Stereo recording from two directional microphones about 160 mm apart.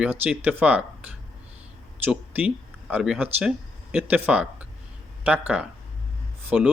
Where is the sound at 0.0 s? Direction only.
10° right (ahead or behind).